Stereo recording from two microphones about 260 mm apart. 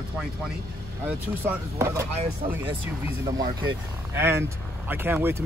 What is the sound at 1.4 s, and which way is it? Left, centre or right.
Speech, centre.